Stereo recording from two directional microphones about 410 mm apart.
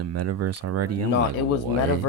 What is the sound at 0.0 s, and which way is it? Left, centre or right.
Speech, right.